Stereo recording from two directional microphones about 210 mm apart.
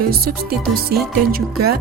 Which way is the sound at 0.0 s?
45° right (ahead or behind).